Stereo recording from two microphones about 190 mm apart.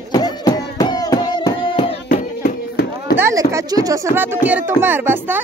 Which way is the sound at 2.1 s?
55° left (ahead or behind).